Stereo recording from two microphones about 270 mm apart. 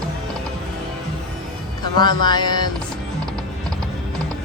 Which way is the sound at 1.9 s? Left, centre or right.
Centre.